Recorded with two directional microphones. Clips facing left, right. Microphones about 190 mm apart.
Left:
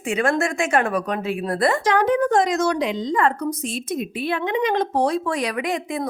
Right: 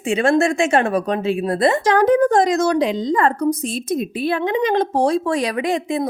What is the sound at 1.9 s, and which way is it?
A woman's voice, 40° right (ahead or behind).